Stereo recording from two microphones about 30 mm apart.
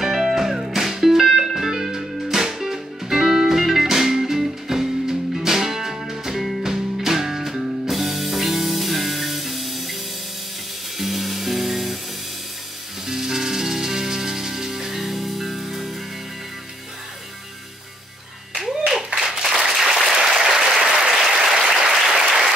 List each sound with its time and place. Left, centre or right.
0.0 s music: centre
7.0 s music: centre
11.0 s music: centre
13.0 s music: centre
15.0 s music: centre
18.6 s clapping: centre
19.4 s a sound: centre
19.7 s applause: centre
20.9 s applause: right